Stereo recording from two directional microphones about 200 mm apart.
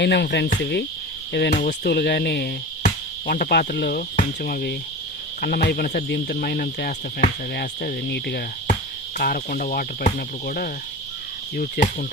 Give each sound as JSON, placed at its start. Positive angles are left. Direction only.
{"t": 0.0, "sound": "insect", "side_deg": 55}
{"t": 1.3, "sound": "speech", "side_deg": 50}